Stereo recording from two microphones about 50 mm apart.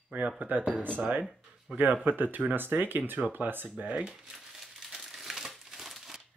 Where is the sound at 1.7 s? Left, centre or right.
Right.